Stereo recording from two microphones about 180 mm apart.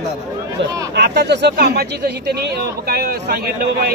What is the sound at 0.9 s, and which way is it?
Speech, 65° right (ahead or behind).